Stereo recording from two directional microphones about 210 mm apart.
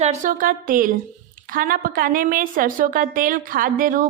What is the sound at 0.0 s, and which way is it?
A woman's voice, 35° right (ahead or behind).